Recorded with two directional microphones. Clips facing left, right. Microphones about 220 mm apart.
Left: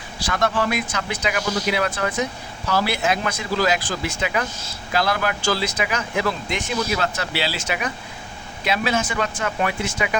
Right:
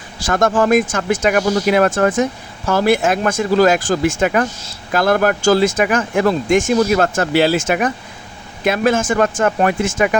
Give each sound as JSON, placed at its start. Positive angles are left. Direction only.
{"t": 0.2, "sound": "speech", "side_deg": -45}